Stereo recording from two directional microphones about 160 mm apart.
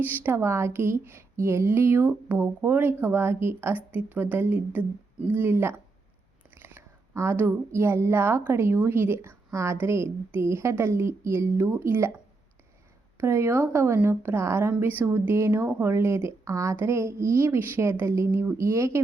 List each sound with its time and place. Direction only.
0.0 s a woman's voice: 10° right (ahead or behind)
13.1 s a woman's voice: 15° right (ahead or behind)